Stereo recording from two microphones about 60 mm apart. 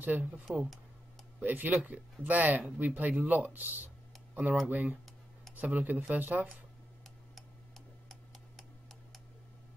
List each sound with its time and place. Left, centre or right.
0.0 s speech: right
0.5 s speech: right
1.4 s speech: right
7.3 s tick-tock: centre